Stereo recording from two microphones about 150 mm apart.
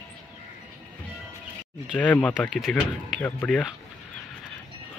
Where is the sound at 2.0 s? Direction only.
10° left (ahead or behind).